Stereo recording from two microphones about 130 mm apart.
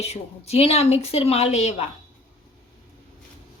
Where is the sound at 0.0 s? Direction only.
55° left (ahead or behind).